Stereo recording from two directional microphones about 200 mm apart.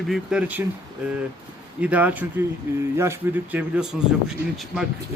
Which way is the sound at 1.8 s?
10° right (ahead or behind).